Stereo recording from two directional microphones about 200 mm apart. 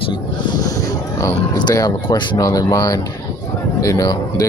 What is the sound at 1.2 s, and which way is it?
Speech, 20° left (ahead or behind).